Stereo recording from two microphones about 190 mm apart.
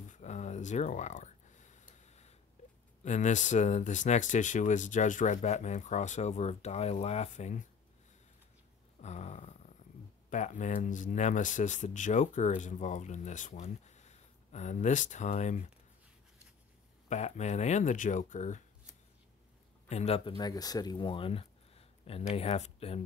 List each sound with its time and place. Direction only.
0.1 s a sound: 35° left (ahead or behind)
3.0 s speech: 40° left (ahead or behind)
9.0 s speech: 35° left (ahead or behind)
17.1 s speech: 35° left (ahead or behind)
19.9 s speech: 35° left (ahead or behind)
20.3 s speech: 20° left (ahead or behind)